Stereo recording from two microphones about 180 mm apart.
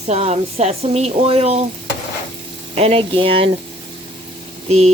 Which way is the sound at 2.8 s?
30° right (ahead or behind).